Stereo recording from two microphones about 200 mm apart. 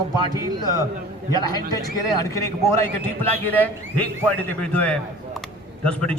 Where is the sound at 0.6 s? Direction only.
20° left (ahead or behind).